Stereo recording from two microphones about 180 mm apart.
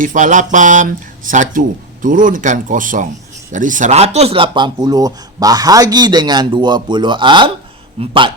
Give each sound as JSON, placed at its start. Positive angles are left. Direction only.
{"t": 0.0, "sound": "speech", "side_deg": -45}